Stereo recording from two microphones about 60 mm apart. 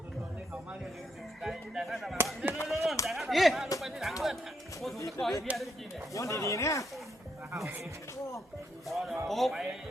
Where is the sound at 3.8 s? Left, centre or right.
Centre.